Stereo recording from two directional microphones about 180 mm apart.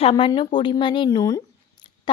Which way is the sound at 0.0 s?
25° left (ahead or behind).